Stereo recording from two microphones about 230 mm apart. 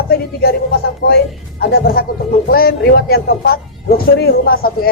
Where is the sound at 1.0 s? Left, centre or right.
Left.